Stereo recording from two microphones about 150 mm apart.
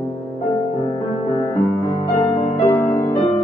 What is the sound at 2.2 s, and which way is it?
Music, 40° left (ahead or behind).